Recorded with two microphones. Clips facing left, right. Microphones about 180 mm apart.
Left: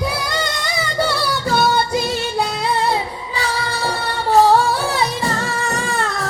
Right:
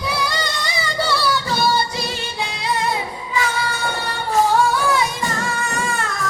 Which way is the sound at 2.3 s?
35° left (ahead or behind).